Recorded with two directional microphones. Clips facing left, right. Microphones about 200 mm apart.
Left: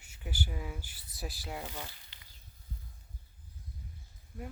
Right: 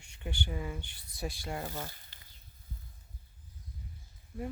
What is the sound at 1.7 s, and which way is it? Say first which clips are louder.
Speech: right 3 dB; 45° right (ahead or behind).